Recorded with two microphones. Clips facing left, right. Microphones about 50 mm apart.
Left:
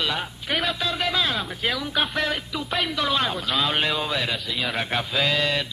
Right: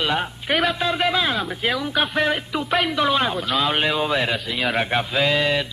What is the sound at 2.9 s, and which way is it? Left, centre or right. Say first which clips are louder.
Speech: right 2 dB; centre.